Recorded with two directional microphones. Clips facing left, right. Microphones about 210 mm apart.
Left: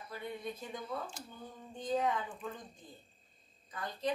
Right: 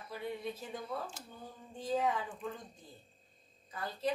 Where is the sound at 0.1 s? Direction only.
5° right (ahead or behind).